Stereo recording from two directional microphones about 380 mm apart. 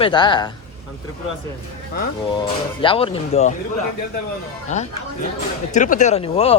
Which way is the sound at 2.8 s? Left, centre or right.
Centre.